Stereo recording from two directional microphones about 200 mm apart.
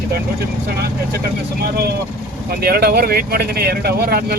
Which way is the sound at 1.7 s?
55° right (ahead or behind).